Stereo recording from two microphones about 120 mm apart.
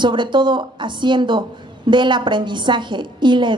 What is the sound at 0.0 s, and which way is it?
A woman's voice, 40° right (ahead or behind).